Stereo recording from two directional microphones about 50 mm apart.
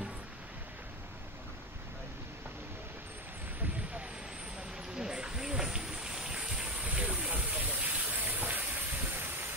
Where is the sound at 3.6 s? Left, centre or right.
Right.